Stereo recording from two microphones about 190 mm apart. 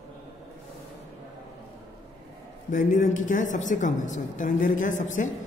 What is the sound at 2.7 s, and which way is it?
A woman's voice, 40° left (ahead or behind).